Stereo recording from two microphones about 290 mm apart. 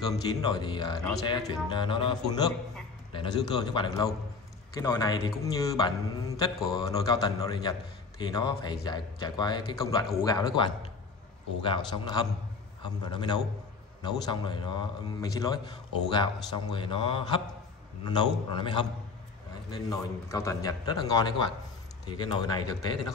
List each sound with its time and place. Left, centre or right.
0.1 s speech: centre